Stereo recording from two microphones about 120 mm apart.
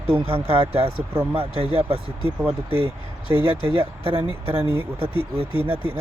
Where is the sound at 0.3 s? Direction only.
50° right (ahead or behind).